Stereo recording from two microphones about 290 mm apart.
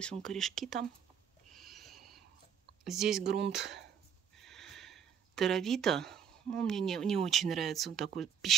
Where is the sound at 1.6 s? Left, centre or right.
Centre.